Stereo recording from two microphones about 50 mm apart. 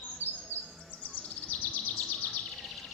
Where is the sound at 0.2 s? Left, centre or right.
Left.